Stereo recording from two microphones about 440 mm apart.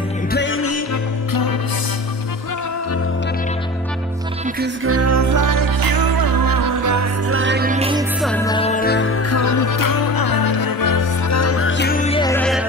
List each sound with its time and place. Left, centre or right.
0.3 s music: left
4.6 s music: right; by 8.0 s centre
8.2 s music: centre; by 9.1 s left
9.3 s music: left; by 12.6 s centre